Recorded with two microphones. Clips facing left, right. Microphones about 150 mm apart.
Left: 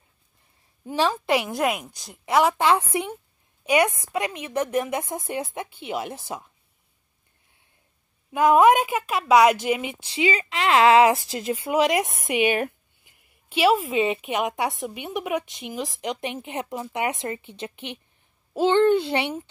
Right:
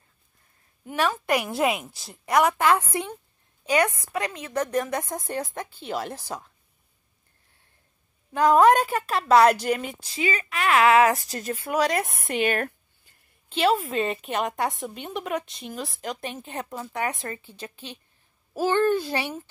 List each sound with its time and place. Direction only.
0.8 s speech: 30° left (ahead or behind)
1.3 s a woman's voice: centre (ahead or behind)
8.3 s speech: 20° left (ahead or behind)
8.8 s a woman's voice: centre (ahead or behind)
10.0 s a woman's voice: 25° left (ahead or behind); by 14.1 s centre (ahead or behind)
14.1 s speech: 10° left (ahead or behind)